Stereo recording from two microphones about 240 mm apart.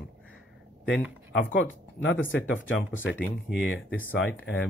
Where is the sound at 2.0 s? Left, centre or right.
Left.